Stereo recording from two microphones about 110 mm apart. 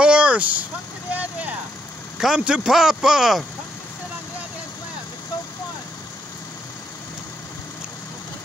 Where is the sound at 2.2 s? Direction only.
5° right (ahead or behind).